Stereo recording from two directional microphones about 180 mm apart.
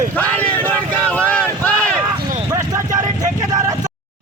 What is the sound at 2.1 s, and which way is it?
Vehicle, 25° right (ahead or behind).